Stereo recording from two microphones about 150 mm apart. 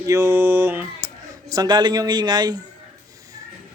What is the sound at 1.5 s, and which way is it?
Speech, 30° right (ahead or behind).